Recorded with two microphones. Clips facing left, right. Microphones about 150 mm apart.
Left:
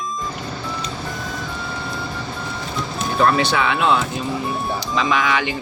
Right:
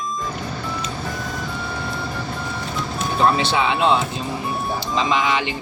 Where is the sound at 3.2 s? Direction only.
20° right (ahead or behind).